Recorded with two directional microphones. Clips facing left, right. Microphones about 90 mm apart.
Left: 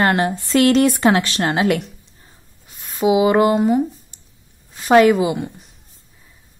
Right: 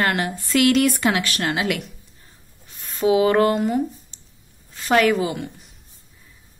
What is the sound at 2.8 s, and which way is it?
A woman's voice, 15° left (ahead or behind).